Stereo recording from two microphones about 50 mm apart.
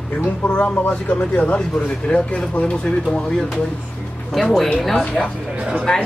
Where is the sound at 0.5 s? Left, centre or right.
Centre.